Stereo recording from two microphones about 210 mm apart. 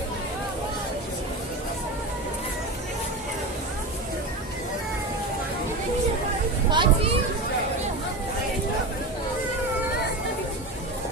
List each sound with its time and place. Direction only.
6.7 s speech: 20° right (ahead or behind)